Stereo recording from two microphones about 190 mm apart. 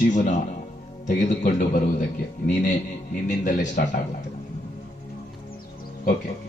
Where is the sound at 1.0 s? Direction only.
40° left (ahead or behind).